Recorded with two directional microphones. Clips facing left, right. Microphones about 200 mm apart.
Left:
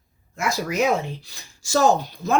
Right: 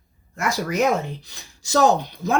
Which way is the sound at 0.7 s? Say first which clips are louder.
Right 1 dB; 20° right (ahead or behind).